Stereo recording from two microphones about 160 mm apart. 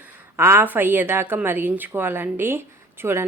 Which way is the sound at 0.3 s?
15° right (ahead or behind).